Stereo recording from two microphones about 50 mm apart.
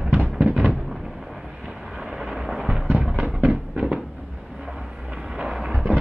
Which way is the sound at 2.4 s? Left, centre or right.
Centre.